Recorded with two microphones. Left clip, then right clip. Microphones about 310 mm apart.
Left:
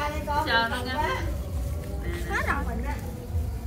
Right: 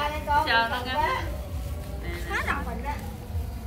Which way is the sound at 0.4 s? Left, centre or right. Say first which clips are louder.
Even; centre.